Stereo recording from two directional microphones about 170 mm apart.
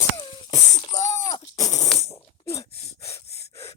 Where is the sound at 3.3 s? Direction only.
40° left (ahead or behind).